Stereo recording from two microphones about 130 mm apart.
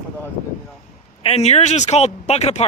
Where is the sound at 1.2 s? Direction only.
50° left (ahead or behind).